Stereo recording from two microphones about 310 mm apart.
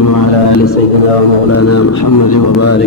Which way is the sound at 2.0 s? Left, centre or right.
Left.